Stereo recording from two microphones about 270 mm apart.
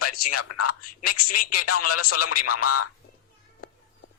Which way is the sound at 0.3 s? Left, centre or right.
Left.